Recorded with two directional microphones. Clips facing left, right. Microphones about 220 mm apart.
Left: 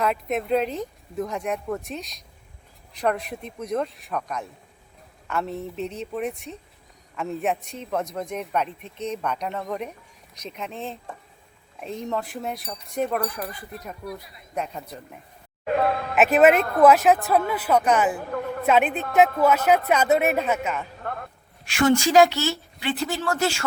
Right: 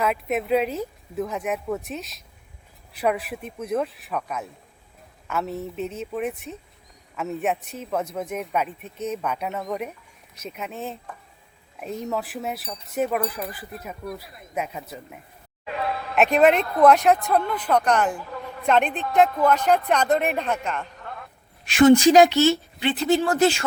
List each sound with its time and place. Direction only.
0.0 s speech: 5° right (ahead or behind)
15.6 s speech: 50° left (ahead or behind)
16.1 s speech: 5° left (ahead or behind)
18.2 s a sound: 55° left (ahead or behind)
18.6 s speech: 5° left (ahead or behind)
21.6 s speech: 20° right (ahead or behind)